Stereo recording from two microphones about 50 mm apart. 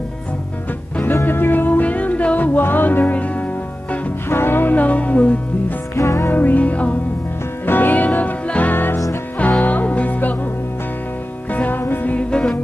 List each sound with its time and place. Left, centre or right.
1.2 s music: left
2.6 s music: left
4.3 s music: left
5.9 s music: left
6.2 s music: left
7.6 s music: left
8.7 s music: left
9.6 s music: left
11.5 s music: left
11.8 s music: left
12.1 s music: left